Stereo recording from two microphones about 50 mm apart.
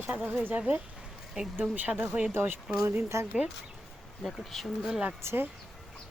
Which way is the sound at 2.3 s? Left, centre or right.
Right.